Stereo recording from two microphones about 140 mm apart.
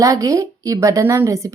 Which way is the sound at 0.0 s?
25° right (ahead or behind).